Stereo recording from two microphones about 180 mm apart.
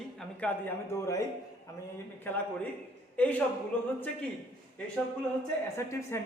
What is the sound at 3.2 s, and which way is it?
Speech, 10° left (ahead or behind).